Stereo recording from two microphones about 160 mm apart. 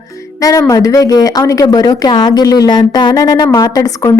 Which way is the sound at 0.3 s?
20° left (ahead or behind).